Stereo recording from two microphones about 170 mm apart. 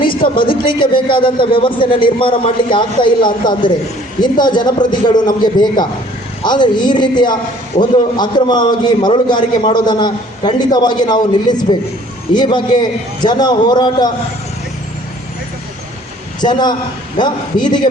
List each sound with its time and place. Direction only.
0.0 s a man's voice: 30° left (ahead or behind)
16.4 s a man's voice: 25° left (ahead or behind)